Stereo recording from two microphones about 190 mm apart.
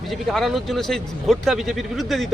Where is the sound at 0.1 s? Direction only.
Centre (ahead or behind).